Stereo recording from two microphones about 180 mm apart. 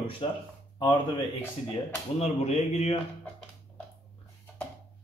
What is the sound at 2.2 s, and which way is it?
Speech, 35° left (ahead or behind).